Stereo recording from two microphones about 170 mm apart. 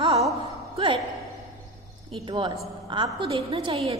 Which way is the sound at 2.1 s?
30° right (ahead or behind).